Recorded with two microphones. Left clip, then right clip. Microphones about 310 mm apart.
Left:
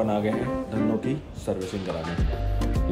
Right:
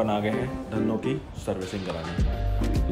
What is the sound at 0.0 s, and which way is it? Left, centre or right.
Speech, centre.